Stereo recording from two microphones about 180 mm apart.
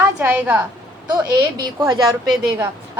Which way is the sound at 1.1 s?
20° right (ahead or behind).